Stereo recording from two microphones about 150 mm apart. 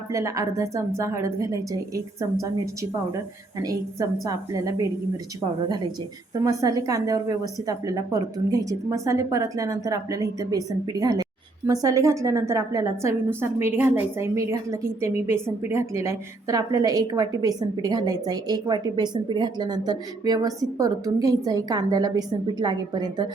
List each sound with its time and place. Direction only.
0.1 s a woman's voice: 20° right (ahead or behind)
3.6 s a woman's voice: 25° right (ahead or behind)
6.4 s a woman's voice: 20° right (ahead or behind)